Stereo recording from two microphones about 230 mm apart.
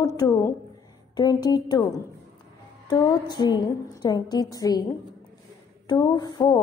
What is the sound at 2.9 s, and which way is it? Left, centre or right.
A woman's voice, centre.